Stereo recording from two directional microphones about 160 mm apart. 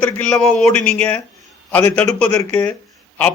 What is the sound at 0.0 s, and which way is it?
Speech, 5° left (ahead or behind).